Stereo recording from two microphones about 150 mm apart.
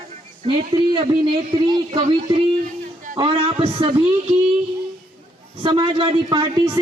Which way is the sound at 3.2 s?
35° right (ahead or behind).